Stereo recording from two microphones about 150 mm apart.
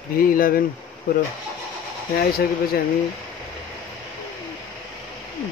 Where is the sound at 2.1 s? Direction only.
90° left.